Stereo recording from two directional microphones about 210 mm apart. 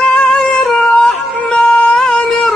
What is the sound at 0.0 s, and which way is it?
Yodeling, 5° left (ahead or behind).